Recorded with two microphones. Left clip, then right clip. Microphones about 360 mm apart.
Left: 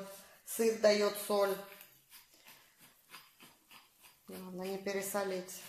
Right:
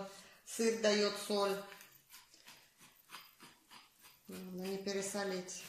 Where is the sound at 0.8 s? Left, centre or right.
Centre.